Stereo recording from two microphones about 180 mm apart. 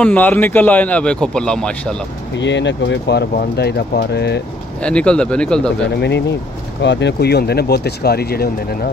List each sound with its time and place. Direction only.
0.0 s a man's voice: 10° left (ahead or behind)
2.3 s speech: 80° left
4.8 s speech: 5° left (ahead or behind)
5.9 s speech: 70° left (ahead or behind)